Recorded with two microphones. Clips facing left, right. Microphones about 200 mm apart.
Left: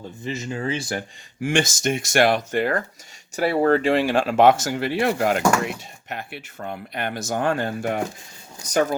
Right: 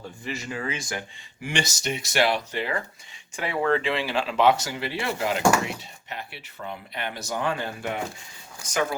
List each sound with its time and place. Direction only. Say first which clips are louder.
0.3 s speech: left 5 dB; 25° left (ahead or behind)
1.5 s speech: left 7 dB; 50° left (ahead or behind)
3.3 s speech: left 6 dB; 40° left (ahead or behind)